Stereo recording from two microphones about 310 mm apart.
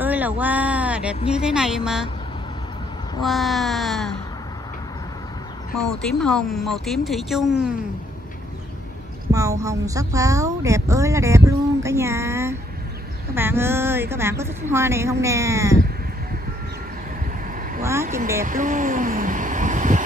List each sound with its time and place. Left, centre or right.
0.0 s a woman's voice: centre
3.2 s speech: centre
6.1 s speech: centre
9.3 s speech: centre
18.0 s speech: right
18.4 s vehicle: right